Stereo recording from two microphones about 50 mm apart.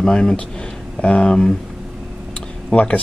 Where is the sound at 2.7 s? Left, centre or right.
Left.